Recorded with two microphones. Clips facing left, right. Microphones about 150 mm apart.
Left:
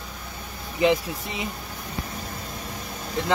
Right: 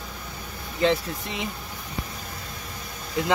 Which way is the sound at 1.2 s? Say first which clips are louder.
Even; centre (ahead or behind).